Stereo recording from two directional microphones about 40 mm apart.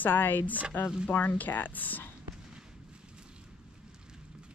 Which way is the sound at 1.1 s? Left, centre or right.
Left.